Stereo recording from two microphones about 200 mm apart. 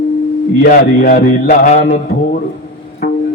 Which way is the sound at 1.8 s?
60° left (ahead or behind).